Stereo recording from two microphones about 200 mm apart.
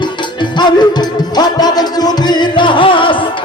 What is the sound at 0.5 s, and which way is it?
Music, 20° left (ahead or behind).